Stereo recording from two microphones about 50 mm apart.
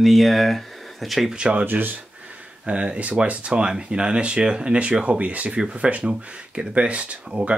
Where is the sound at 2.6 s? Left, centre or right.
Right.